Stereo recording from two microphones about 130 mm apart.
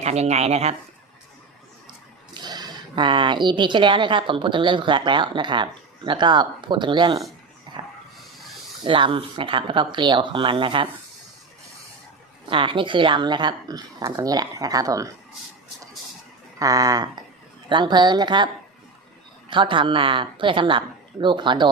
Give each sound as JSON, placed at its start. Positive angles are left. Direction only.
{"t": 0.0, "sound": "speech", "side_deg": -55}
{"t": 2.3, "sound": "speech", "side_deg": -35}
{"t": 8.8, "sound": "speech", "side_deg": -40}
{"t": 12.5, "sound": "speech", "side_deg": -40}
{"t": 16.6, "sound": "speech", "side_deg": -25}
{"t": 19.5, "sound": "speech", "side_deg": -40}